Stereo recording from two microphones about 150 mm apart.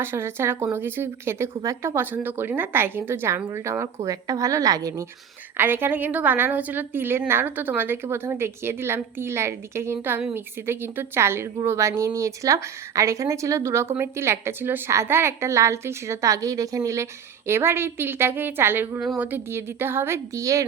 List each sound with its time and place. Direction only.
0.0 s a woman's voice: 15° right (ahead or behind)